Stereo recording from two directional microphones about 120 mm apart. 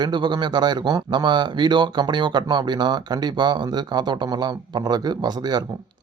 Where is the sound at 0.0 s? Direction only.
40° right (ahead or behind).